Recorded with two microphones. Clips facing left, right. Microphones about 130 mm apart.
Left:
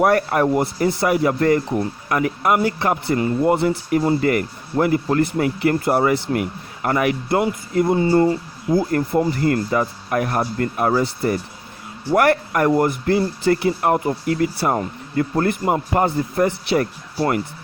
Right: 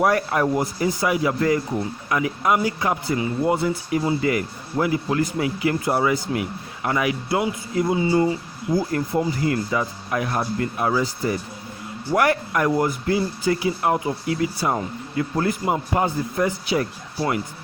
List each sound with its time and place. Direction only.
0.0 s speech: 55° left (ahead or behind)
11.0 s a man's voice: 65° left (ahead or behind)